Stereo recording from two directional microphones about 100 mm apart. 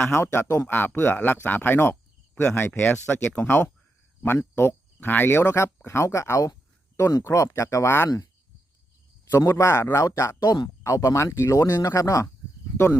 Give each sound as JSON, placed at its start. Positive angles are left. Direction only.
{"t": 0.0, "sound": "speech", "side_deg": 25}
{"t": 0.7, "sound": "speech", "side_deg": 20}
{"t": 9.3, "sound": "speech", "side_deg": 30}